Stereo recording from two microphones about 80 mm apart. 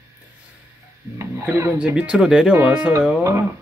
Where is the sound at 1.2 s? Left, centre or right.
Right.